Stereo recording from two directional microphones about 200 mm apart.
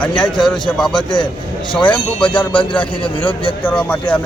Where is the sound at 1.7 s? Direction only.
5° left (ahead or behind).